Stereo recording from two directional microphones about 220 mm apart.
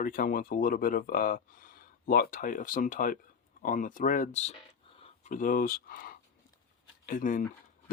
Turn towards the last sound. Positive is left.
turn(degrees=40)  # may be behind; listen again after turning